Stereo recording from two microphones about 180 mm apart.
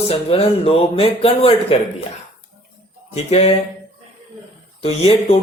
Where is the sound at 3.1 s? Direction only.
35° left (ahead or behind).